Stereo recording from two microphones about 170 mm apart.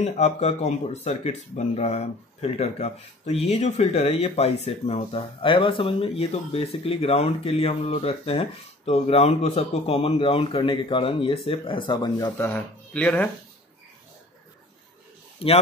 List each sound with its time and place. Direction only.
0.0 s speech: 40° left (ahead or behind)
12.4 s speech: 10° left (ahead or behind)
15.3 s a sound: 35° left (ahead or behind)